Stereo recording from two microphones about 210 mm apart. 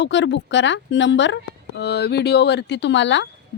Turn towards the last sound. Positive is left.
turn(degrees=60)  # may be behind; listen again after turning